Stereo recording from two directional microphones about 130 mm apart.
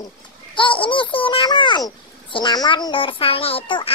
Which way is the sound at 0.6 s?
40° left (ahead or behind).